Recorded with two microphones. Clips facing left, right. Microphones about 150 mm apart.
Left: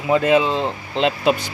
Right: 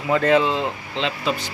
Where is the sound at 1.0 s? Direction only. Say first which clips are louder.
Left 7 dB; 50° left (ahead or behind).